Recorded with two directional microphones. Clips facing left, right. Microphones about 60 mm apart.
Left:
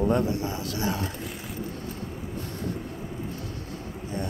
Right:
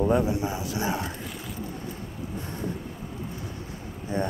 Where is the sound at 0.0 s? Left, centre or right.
Centre.